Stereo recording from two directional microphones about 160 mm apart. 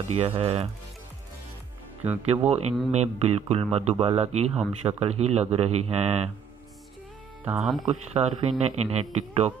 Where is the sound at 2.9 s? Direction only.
40° right (ahead or behind).